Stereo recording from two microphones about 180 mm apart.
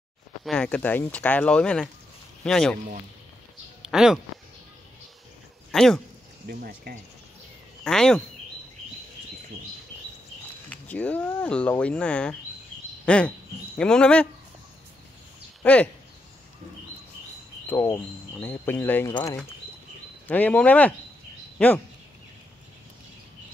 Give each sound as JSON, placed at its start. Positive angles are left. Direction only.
{"t": 0.5, "sound": "speech", "side_deg": 5}
{"t": 3.8, "sound": "speech", "side_deg": -5}
{"t": 5.7, "sound": "speech", "side_deg": 5}
{"t": 6.4, "sound": "speech", "side_deg": -55}
{"t": 7.8, "sound": "speech", "side_deg": 5}
{"t": 10.7, "sound": "speech", "side_deg": 10}
{"t": 15.6, "sound": "speech", "side_deg": 5}
{"t": 17.6, "sound": "speech", "side_deg": 15}
{"t": 20.2, "sound": "speech", "side_deg": 10}